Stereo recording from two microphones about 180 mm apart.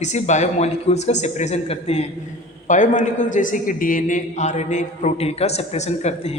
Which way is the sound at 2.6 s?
45° left (ahead or behind).